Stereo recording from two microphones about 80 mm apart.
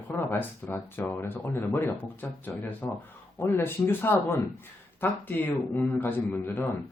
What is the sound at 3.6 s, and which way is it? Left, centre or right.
Speech, left.